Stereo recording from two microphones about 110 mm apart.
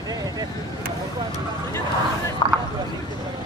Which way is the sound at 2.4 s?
40° left (ahead or behind).